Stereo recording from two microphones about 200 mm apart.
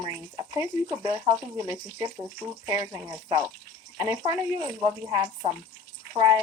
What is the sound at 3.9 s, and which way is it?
Speech, 20° right (ahead or behind).